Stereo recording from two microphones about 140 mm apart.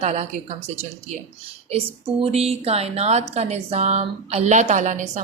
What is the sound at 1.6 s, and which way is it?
A woman's voice, 45° right (ahead or behind).